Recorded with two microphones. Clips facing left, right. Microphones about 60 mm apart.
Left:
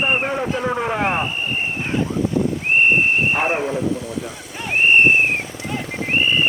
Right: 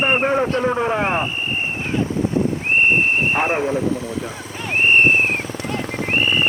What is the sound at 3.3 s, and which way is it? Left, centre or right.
Speech, centre.